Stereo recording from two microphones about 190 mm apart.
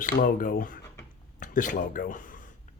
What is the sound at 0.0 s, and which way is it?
Speech, 45° left (ahead or behind).